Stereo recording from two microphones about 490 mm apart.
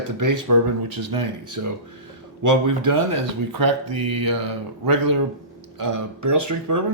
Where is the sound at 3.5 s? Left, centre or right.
Right.